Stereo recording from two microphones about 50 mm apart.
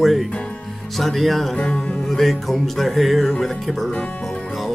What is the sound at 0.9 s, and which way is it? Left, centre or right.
Speech, centre.